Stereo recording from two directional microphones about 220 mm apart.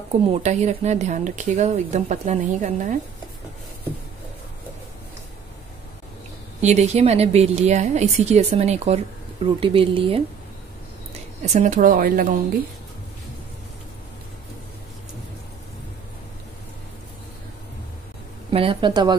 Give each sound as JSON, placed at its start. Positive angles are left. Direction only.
{"t": 0.3, "sound": "speech", "side_deg": -30}
{"t": 6.6, "sound": "speech", "side_deg": -30}
{"t": 11.4, "sound": "speech", "side_deg": -30}
{"t": 18.5, "sound": "speech", "side_deg": -25}